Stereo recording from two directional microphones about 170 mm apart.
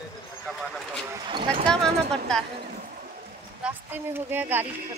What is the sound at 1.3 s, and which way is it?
Speech, 30° right (ahead or behind).